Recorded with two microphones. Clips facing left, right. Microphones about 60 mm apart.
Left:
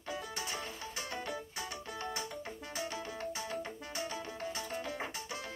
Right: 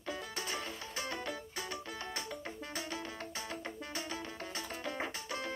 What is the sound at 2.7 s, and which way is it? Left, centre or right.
Music, centre.